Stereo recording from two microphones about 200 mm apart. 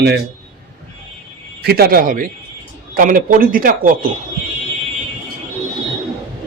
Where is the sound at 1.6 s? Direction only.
50° right (ahead or behind).